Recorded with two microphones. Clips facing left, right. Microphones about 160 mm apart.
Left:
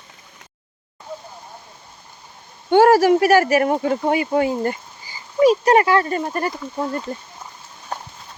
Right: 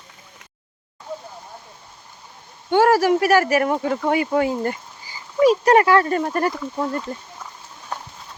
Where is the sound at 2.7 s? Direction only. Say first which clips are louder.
Left 3 dB; 35° left (ahead or behind).